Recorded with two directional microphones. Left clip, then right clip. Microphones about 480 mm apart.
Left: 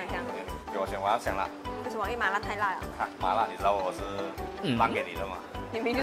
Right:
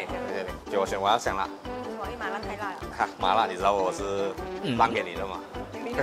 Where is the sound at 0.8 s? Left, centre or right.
Right.